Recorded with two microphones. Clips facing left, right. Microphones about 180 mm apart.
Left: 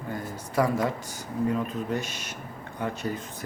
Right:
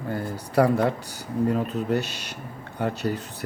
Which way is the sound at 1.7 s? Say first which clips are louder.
Right 5 dB; 70° right (ahead or behind).